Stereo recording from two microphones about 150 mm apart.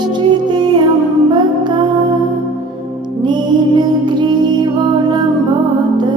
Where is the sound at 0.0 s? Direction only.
30° right (ahead or behind).